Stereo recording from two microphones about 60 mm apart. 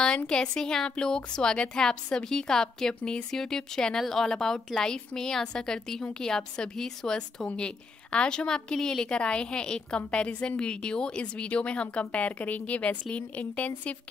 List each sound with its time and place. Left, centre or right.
0.3 s a woman's voice: centre